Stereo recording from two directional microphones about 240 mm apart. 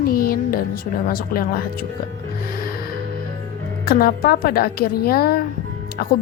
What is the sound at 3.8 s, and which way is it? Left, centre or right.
A woman's voice, left.